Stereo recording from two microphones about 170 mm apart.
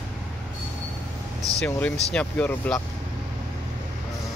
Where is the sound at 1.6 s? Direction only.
10° left (ahead or behind).